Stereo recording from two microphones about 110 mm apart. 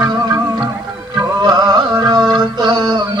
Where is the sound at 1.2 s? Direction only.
40° right (ahead or behind).